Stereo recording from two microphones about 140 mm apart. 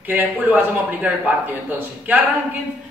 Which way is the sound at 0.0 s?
10° right (ahead or behind).